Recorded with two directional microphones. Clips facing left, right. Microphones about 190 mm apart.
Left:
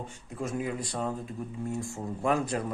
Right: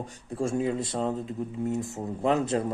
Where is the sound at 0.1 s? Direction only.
30° right (ahead or behind).